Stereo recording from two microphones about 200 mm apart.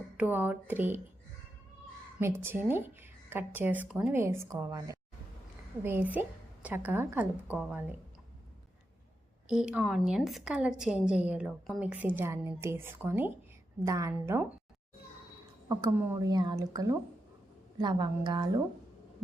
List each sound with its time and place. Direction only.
0.2 s speech: 10° right (ahead or behind)
2.1 s speech: 10° right (ahead or behind)
9.5 s a woman's voice: 5° right (ahead or behind)
16.0 s speech: 15° right (ahead or behind)